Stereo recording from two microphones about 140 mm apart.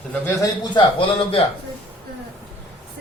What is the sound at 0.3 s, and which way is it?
Speech, 30° left (ahead or behind).